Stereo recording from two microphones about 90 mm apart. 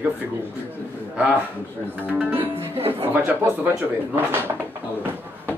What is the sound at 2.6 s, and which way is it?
Speech, 90° right.